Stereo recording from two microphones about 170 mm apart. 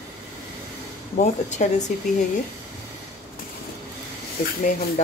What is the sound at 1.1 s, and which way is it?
Speech, 45° left (ahead or behind).